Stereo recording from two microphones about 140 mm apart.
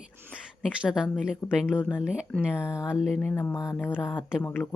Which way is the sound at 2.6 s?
20° left (ahead or behind).